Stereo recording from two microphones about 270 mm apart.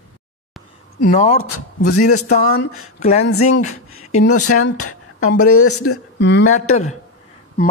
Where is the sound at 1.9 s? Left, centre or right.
Left.